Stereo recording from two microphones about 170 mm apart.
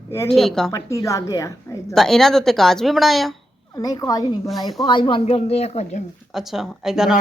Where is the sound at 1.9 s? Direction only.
Centre (ahead or behind).